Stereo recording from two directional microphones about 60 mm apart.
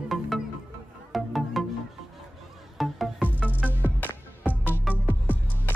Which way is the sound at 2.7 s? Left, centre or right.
Centre.